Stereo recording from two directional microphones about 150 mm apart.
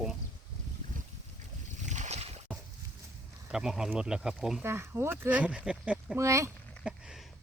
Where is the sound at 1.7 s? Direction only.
55° right (ahead or behind).